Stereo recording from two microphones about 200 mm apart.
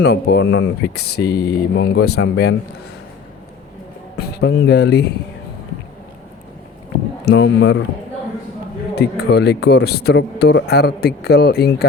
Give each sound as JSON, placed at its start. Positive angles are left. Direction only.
{"t": 0.0, "sound": "speech", "side_deg": 55}
{"t": 4.2, "sound": "speech", "side_deg": 55}
{"t": 7.3, "sound": "speech", "side_deg": 65}
{"t": 9.0, "sound": "a man's voice", "side_deg": 55}